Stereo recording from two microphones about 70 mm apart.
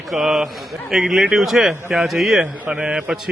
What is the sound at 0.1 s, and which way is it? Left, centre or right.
A man's voice, centre.